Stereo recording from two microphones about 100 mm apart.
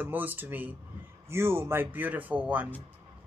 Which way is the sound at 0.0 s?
20° right (ahead or behind).